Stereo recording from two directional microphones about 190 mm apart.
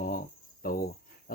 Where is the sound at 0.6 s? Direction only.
50° left (ahead or behind).